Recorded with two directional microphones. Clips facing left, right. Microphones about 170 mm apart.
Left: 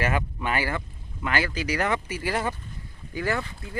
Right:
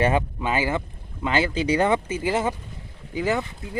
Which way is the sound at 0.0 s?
25° right (ahead or behind).